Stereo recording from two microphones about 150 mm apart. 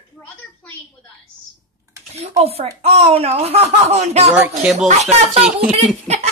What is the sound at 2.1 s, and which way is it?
Speech, 45° right (ahead or behind).